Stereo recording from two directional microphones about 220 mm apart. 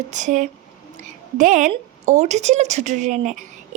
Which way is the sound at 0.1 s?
35° right (ahead or behind).